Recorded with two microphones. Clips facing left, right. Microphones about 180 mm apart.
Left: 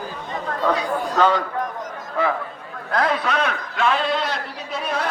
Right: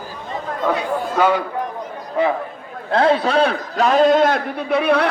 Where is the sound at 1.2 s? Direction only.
10° right (ahead or behind).